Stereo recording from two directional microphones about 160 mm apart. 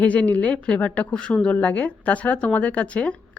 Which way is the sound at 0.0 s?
10° left (ahead or behind).